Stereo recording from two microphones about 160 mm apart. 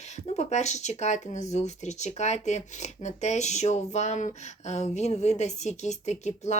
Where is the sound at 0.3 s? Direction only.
45° left (ahead or behind).